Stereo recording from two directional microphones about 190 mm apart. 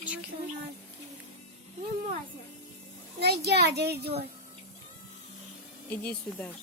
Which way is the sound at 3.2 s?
60° right (ahead or behind).